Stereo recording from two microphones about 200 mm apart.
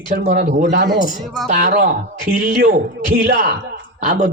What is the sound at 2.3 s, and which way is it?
Speech, 45° right (ahead or behind).